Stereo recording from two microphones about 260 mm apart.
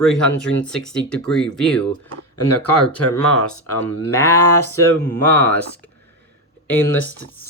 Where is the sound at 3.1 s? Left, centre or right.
Centre.